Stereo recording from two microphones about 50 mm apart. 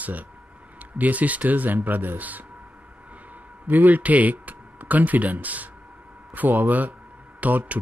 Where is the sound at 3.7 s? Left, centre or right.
Right.